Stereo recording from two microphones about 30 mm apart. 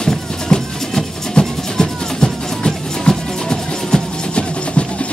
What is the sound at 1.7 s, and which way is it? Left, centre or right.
Music, centre.